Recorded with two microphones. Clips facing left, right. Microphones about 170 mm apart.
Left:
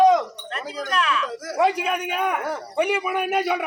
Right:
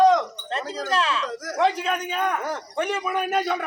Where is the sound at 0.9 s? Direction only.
30° right (ahead or behind).